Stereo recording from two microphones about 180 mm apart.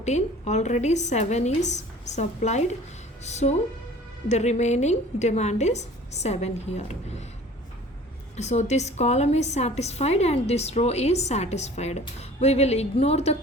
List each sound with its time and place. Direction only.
0.0 s a woman's voice: 40° left (ahead or behind)
8.4 s a woman's voice: 40° left (ahead or behind)